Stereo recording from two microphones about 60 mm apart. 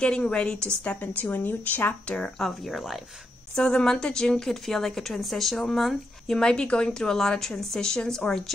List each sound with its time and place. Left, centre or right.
0.0 s a woman's voice: centre
0.8 s a woman's voice: left
2.3 s speech: centre
3.5 s a woman's voice: centre